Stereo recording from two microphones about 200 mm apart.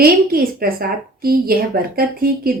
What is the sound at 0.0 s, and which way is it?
A woman's voice, 50° right (ahead or behind).